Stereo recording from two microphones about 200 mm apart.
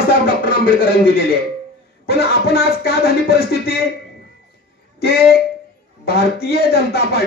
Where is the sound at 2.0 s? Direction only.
50° left (ahead or behind).